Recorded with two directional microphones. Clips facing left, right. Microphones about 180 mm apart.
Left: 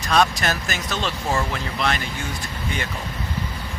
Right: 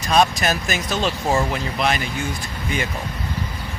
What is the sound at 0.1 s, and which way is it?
Speech, 15° right (ahead or behind).